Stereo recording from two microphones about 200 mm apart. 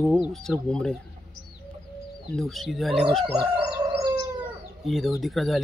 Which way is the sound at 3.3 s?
25° right (ahead or behind).